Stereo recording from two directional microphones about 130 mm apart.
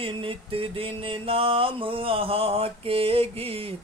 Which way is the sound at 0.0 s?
45° right (ahead or behind).